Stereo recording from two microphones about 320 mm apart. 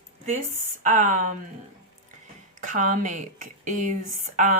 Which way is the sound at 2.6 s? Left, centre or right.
Right.